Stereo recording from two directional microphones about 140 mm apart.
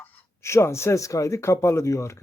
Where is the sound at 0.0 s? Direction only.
20° left (ahead or behind).